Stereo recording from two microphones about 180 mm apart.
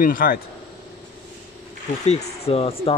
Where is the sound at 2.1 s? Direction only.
35° left (ahead or behind).